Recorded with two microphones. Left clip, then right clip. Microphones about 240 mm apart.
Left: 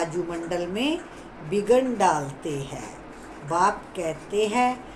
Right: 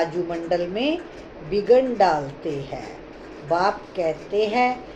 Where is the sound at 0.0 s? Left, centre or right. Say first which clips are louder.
Right 4 dB; centre.